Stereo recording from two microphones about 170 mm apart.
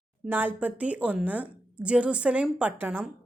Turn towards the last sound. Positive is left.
turn(degrees=-10)  # may be behind; listen again after turning